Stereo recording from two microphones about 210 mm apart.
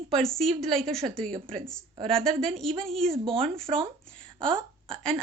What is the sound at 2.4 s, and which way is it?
Speech, centre (ahead or behind).